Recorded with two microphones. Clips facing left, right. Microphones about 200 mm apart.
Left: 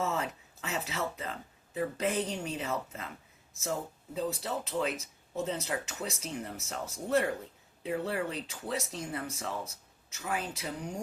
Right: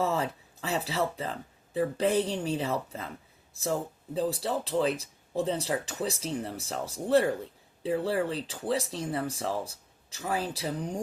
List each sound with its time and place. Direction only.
0.0 s speech: 35° right (ahead or behind)